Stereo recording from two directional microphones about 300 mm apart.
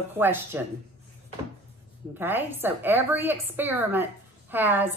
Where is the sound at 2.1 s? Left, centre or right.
Centre.